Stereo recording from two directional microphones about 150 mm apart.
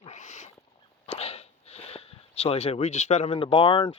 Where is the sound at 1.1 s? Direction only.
45° left (ahead or behind).